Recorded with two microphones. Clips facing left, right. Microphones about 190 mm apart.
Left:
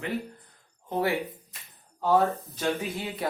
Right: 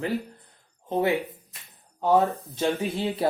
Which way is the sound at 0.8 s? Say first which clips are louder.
Right 3 dB; 20° right (ahead or behind).